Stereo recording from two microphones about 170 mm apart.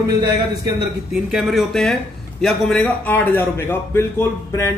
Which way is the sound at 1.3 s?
Centre (ahead or behind).